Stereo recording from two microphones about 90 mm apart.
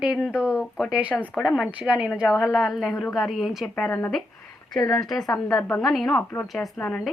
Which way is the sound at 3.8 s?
20° left (ahead or behind).